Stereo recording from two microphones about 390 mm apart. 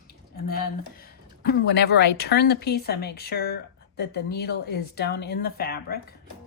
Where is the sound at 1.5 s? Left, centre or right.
Left.